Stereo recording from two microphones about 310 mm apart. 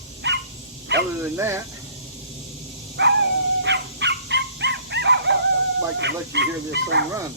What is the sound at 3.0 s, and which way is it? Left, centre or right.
Speech, right.